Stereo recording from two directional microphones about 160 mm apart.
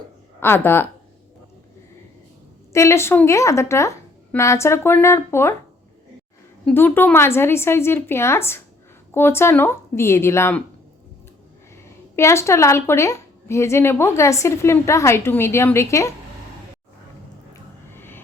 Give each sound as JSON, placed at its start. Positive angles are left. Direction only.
{"t": 0.3, "sound": "a woman's voice", "side_deg": 15}
{"t": 2.7, "sound": "a woman's voice", "side_deg": 15}
{"t": 6.7, "sound": "a woman's voice", "side_deg": 10}
{"t": 12.1, "sound": "a woman's voice", "side_deg": 15}
{"t": 17.9, "sound": "music", "side_deg": 15}